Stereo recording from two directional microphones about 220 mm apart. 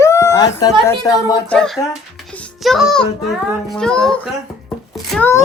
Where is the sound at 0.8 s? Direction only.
15° left (ahead or behind).